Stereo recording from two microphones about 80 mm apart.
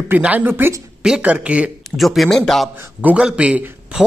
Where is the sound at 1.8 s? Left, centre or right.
Centre.